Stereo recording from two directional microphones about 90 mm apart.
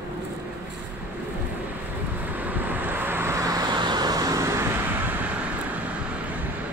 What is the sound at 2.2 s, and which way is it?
Vehicle, 20° right (ahead or behind).